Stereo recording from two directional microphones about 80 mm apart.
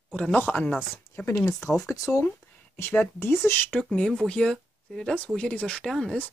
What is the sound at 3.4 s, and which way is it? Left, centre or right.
Speech, left.